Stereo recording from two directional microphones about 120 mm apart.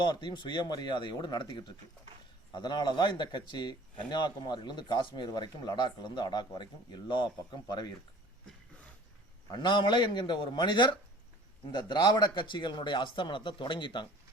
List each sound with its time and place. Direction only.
0.0 s a man's voice: 40° left (ahead or behind)
9.5 s a man's voice: 40° left (ahead or behind)